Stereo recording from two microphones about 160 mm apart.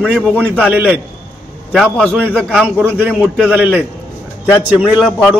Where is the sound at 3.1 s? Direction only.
10° right (ahead or behind).